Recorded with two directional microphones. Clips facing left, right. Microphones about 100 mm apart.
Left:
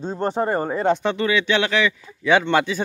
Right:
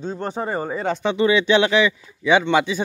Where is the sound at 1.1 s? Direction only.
20° right (ahead or behind).